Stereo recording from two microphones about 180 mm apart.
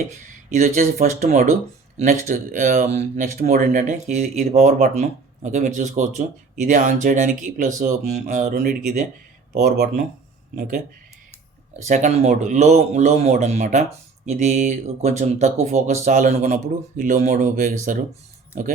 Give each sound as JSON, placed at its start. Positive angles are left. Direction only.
{"t": 0.1, "sound": "speech", "side_deg": -40}
{"t": 9.5, "sound": "speech", "side_deg": -60}
{"t": 11.8, "sound": "speech", "side_deg": -40}